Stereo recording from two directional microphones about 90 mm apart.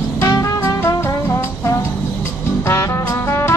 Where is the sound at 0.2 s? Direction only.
35° left (ahead or behind).